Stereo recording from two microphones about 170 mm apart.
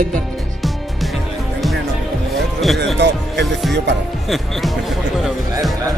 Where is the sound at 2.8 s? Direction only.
90° right.